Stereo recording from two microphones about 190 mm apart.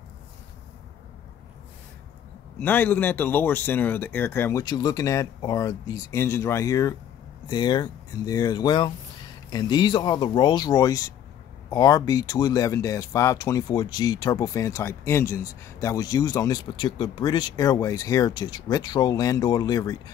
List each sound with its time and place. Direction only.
2.6 s speech: 10° left (ahead or behind)